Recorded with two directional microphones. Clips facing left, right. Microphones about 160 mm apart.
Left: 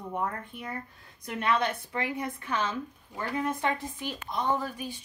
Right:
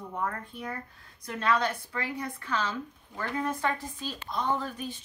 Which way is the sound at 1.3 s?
20° left (ahead or behind).